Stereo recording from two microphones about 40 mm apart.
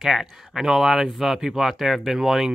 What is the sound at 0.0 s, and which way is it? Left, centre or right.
Speech, centre.